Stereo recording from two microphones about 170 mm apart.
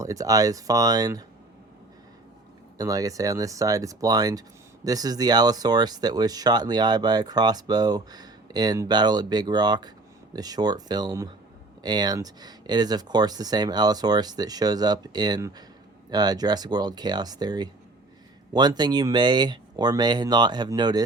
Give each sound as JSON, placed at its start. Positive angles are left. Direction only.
{"t": 0.0, "sound": "speech", "side_deg": -20}
{"t": 2.7, "sound": "speech", "side_deg": -20}